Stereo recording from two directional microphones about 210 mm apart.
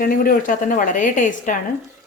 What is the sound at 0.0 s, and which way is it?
A woman's voice, 40° left (ahead or behind).